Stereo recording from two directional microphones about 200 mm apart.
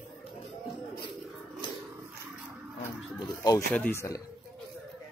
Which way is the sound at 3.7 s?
10° left (ahead or behind).